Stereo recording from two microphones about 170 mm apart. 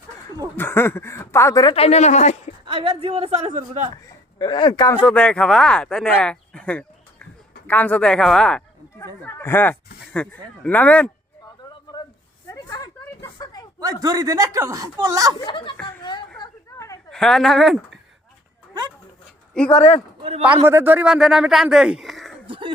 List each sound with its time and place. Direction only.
0.5 s speech: 15° left (ahead or behind)
1.7 s speech: 35° left (ahead or behind)
2.6 s speech: 35° right (ahead or behind)
4.0 s speech: 25° left (ahead or behind)
5.0 s speech: 5° left (ahead or behind)
11.6 s a sound: 25° left (ahead or behind)
13.7 s speech: 20° right (ahead or behind)
15.4 s a woman's voice: 30° left (ahead or behind)
16.4 s a sound: 20° left (ahead or behind)
17.1 s speech: 5° left (ahead or behind)
19.7 s a man's voice: 45° left (ahead or behind)
20.7 s speech: 10° right (ahead or behind)
22.4 s speech: 30° right (ahead or behind)